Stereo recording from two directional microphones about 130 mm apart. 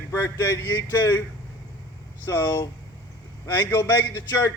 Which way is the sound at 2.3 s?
20° left (ahead or behind).